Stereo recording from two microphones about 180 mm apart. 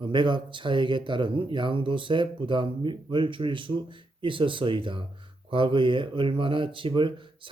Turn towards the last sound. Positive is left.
turn(degrees=-25)  # may be behind; listen again after turning